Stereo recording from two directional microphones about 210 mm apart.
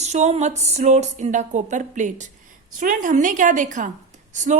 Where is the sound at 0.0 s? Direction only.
30° right (ahead or behind).